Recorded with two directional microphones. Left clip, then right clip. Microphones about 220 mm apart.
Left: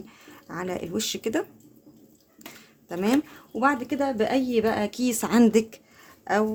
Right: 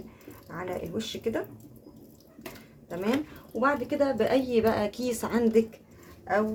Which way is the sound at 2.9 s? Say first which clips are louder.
Left 4 dB; 55° left (ahead or behind).